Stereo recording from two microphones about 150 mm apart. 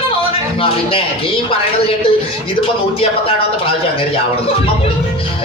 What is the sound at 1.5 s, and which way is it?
Speech, 35° left (ahead or behind).